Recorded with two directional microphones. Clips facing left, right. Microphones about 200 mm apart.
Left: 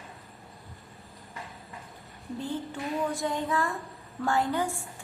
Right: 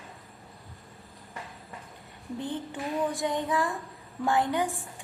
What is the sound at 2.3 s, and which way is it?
A woman's voice, 20° right (ahead or behind).